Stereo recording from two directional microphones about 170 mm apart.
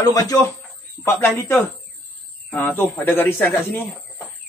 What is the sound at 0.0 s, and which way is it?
Speech, 20° left (ahead or behind).